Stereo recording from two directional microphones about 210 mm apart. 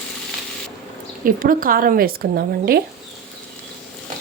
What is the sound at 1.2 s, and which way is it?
Frying, 40° right (ahead or behind).